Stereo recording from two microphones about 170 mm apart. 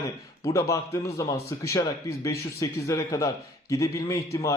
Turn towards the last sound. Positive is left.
turn(degrees=20)  # may be behind; listen again after turning